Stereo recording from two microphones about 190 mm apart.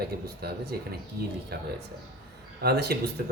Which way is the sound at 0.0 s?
55° right (ahead or behind).